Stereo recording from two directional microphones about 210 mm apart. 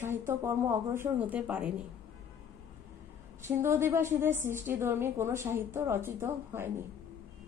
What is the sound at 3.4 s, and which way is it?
A woman's voice, 10° right (ahead or behind).